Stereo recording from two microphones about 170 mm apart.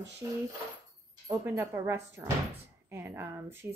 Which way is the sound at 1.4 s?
15° right (ahead or behind).